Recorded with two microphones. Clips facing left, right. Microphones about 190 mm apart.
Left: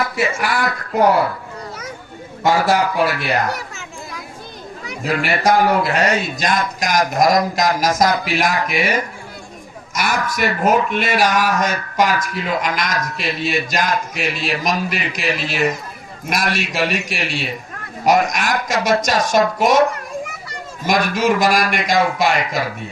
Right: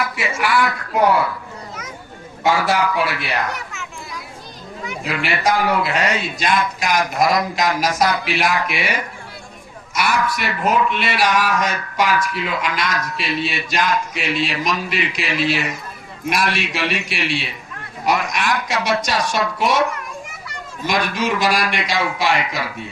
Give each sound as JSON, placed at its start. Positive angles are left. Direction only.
{"t": 0.2, "sound": "speech", "side_deg": 40}
{"t": 2.5, "sound": "speech", "side_deg": 40}
{"t": 4.9, "sound": "speech", "side_deg": 45}